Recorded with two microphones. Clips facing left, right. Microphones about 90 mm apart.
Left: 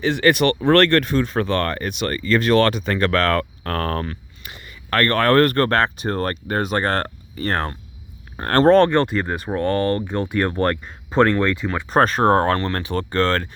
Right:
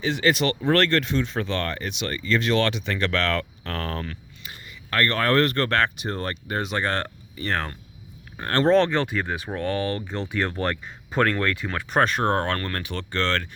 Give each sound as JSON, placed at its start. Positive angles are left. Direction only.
{"t": 0.0, "sound": "speech", "side_deg": 60}
{"t": 4.4, "sound": "speech", "side_deg": 60}
{"t": 11.1, "sound": "speech", "side_deg": 25}
{"t": 11.9, "sound": "speech", "side_deg": 40}